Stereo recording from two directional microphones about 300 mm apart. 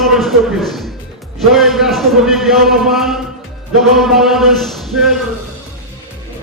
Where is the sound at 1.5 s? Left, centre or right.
Centre.